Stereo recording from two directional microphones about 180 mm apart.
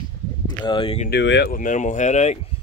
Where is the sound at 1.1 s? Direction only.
70° left (ahead or behind).